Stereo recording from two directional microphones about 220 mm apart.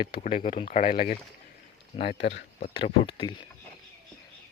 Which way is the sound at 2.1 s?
55° left (ahead or behind).